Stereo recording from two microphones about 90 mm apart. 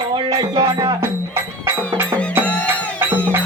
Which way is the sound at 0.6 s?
50° right (ahead or behind).